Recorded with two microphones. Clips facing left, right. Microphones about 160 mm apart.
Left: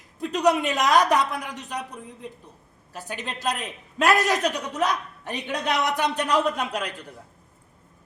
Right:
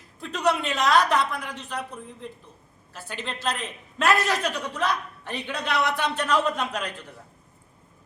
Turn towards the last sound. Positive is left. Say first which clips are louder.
# left 1 dB
turn(degrees=10)  # may be behind; listen again after turning